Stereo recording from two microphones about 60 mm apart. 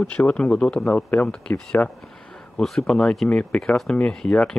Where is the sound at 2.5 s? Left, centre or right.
Centre.